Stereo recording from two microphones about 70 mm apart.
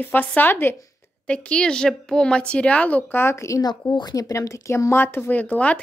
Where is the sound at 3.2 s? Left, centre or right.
Left.